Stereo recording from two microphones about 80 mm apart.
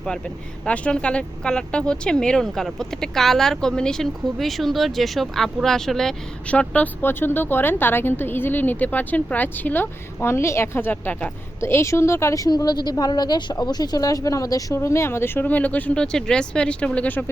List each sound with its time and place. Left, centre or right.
0.6 s speech: centre
6.5 s speech: centre
11.6 s speech: left
12.5 s a woman's voice: left
14.8 s speech: left; by 17.2 s centre